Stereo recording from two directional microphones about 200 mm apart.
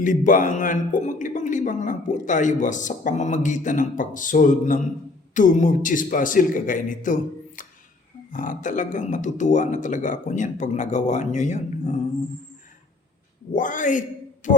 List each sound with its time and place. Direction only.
0.0 s a man's voice: 40° left (ahead or behind)
13.5 s a man's voice: 40° left (ahead or behind)
14.4 s a sound: 40° left (ahead or behind)